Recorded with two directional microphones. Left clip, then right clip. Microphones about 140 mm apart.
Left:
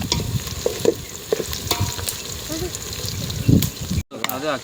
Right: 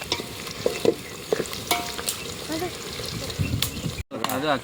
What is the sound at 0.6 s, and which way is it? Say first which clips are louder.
Stir: left 2 dB; 20° left (ahead or behind).